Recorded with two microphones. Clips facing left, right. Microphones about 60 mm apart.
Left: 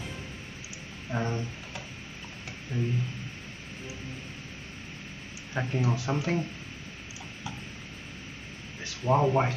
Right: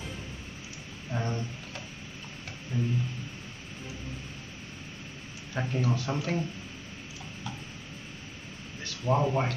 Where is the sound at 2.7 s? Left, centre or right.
Left.